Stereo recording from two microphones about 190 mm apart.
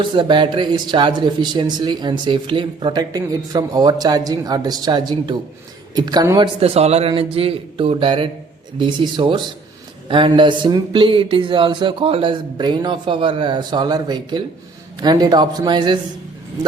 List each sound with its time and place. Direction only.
0.0 s speech: 25° right (ahead or behind)
6.6 s speech: 30° right (ahead or behind)